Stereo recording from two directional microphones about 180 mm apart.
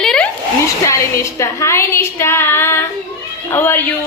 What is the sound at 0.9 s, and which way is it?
A woman's voice, 15° left (ahead or behind).